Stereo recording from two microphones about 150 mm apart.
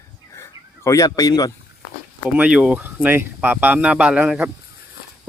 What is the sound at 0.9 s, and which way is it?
Speech, 20° left (ahead or behind).